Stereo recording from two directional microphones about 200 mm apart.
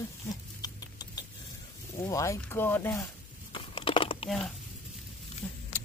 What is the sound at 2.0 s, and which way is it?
Speech, 15° left (ahead or behind).